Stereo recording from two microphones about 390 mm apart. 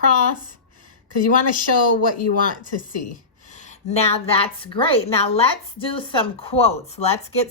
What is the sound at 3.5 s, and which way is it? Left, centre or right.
A woman's voice, centre.